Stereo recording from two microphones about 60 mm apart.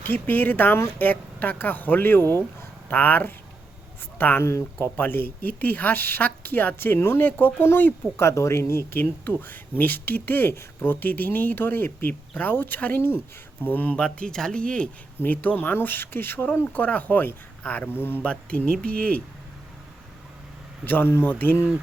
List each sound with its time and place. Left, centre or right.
0.0 s speech: left
8.2 s speech: left
13.9 s speech: centre
15.2 s speech: left
18.2 s speech: left
20.8 s speech: left